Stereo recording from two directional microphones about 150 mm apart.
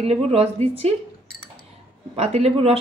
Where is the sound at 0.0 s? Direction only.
40° right (ahead or behind).